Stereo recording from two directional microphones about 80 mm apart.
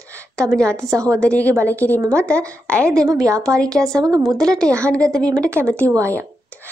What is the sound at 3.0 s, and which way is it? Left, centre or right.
Speech, right.